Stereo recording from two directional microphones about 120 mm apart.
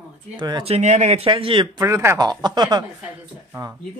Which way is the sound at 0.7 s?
75° right (ahead or behind).